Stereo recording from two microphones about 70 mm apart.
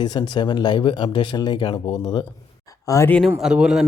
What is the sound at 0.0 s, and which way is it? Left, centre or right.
Speech, left.